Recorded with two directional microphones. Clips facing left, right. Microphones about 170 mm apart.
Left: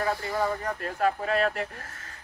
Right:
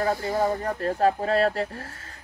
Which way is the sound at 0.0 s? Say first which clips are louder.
Right 4 dB; 30° right (ahead or behind).